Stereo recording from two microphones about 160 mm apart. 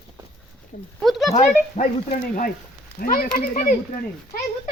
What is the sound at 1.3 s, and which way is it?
Speech, 50° left (ahead or behind).